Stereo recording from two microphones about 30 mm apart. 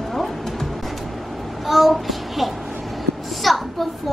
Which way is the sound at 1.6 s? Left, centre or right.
Centre.